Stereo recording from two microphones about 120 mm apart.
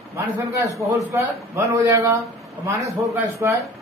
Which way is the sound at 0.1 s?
25° right (ahead or behind).